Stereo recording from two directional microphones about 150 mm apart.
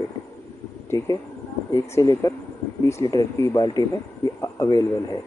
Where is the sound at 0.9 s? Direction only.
20° left (ahead or behind).